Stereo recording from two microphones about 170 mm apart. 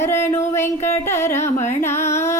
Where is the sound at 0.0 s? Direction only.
15° left (ahead or behind).